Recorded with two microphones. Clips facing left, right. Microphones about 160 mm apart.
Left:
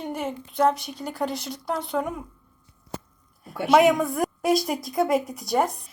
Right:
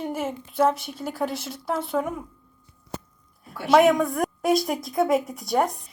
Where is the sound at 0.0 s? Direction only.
5° right (ahead or behind).